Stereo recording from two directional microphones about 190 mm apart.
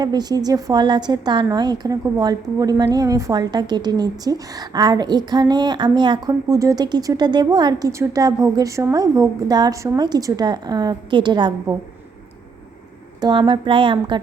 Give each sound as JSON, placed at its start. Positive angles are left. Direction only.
{"t": 0.0, "sound": "a woman's voice", "side_deg": -20}
{"t": 13.2, "sound": "a woman's voice", "side_deg": -25}